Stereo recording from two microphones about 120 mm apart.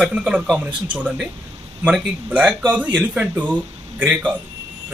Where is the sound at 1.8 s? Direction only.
10° right (ahead or behind).